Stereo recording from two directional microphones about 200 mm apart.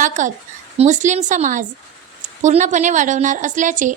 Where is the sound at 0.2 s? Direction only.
40° right (ahead or behind).